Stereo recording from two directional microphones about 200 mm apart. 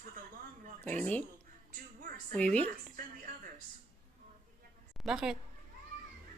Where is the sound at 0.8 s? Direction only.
10° left (ahead or behind).